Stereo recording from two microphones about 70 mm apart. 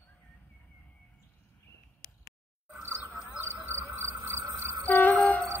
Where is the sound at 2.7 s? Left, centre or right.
Right.